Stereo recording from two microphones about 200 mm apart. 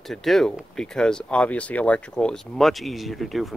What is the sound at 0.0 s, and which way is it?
Speech, centre (ahead or behind).